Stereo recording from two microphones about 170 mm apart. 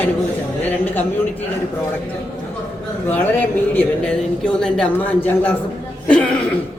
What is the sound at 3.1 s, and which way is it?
A man's voice, 10° left (ahead or behind).